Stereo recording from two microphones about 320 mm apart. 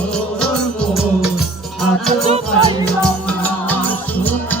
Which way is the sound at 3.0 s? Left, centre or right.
Centre.